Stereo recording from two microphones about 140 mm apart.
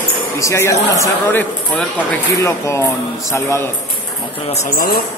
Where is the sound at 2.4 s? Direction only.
20° left (ahead or behind).